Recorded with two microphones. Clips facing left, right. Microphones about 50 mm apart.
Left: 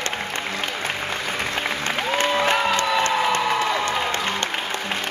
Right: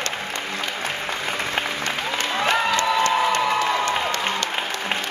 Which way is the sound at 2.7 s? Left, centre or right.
Left.